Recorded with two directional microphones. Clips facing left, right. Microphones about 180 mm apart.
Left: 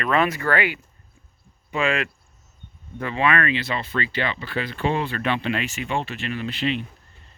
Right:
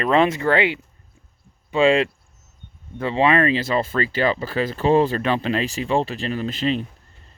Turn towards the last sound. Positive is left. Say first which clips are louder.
# right 3 dB
turn(degrees=-40)  # may be behind; listen again after turning